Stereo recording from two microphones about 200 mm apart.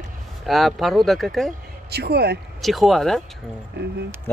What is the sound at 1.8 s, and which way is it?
Speech, 55° right (ahead or behind).